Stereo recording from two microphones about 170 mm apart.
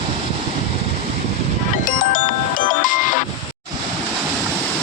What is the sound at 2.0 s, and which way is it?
Music, 55° left (ahead or behind).